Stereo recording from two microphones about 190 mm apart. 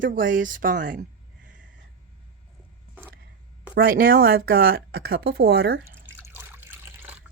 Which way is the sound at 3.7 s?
50° right (ahead or behind).